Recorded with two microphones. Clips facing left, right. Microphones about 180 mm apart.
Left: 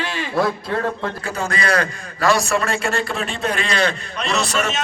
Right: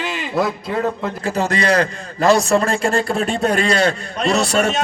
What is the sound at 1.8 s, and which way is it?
A man's voice, 25° right (ahead or behind).